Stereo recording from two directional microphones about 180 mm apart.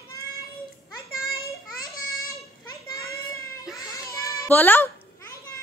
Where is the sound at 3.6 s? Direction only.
Centre (ahead or behind).